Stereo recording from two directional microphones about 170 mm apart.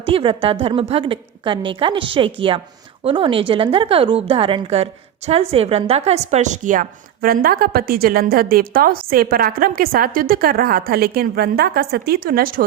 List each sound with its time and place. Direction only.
0.1 s a woman's voice: 30° right (ahead or behind); by 12.6 s 55° right (ahead or behind)